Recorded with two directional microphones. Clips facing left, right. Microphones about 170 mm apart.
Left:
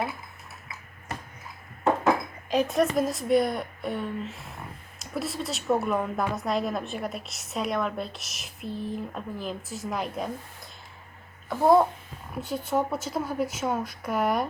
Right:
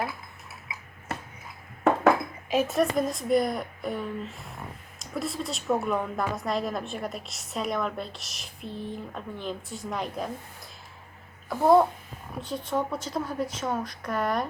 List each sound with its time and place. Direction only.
2.5 s a woman's voice: 5° right (ahead or behind)
11.4 s a child's voice: centre (ahead or behind)